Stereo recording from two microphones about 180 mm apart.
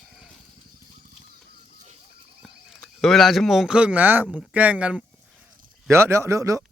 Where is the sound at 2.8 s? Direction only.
Centre (ahead or behind); by 6.6 s 15° right (ahead or behind).